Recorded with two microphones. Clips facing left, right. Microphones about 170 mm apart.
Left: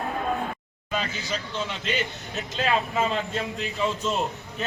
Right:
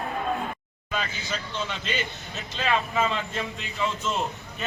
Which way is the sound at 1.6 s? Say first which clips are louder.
Left 2 dB; centre (ahead or behind).